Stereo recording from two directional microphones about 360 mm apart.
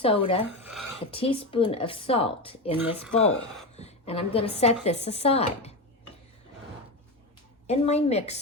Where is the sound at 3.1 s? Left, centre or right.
Centre.